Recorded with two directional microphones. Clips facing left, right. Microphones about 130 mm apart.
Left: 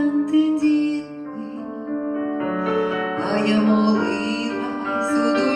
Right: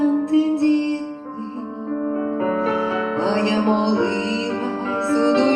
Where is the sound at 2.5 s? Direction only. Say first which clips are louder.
Even; 30° right (ahead or behind).